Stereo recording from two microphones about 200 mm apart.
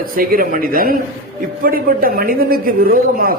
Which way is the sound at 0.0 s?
45° right (ahead or behind).